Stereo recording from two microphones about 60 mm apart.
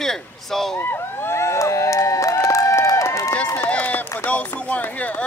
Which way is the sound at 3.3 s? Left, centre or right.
Left.